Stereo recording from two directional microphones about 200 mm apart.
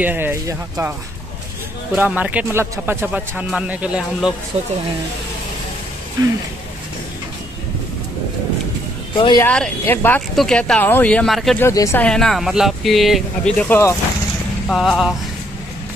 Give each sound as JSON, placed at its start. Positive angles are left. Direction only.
{"t": 0.0, "sound": "speech", "side_deg": -10}
{"t": 2.0, "sound": "speech", "side_deg": -10}
{"t": 4.5, "sound": "speech", "side_deg": -30}
{"t": 9.1, "sound": "speech", "side_deg": 25}
{"t": 9.4, "sound": "speech", "side_deg": 10}
{"t": 11.6, "sound": "speech", "side_deg": 15}
{"t": 13.6, "sound": "speech", "side_deg": 10}
{"t": 14.7, "sound": "speech", "side_deg": 0}